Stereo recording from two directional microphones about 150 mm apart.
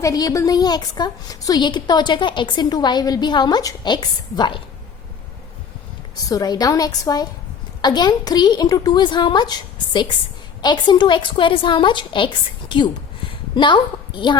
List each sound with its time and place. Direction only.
0.0 s a woman's voice: 25° left (ahead or behind)
6.2 s a woman's voice: 25° left (ahead or behind)